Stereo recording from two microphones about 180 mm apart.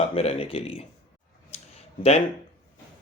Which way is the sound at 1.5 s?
40° left (ahead or behind).